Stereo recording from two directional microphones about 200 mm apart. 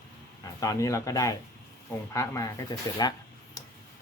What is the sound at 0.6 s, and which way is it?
Speech, 15° left (ahead or behind).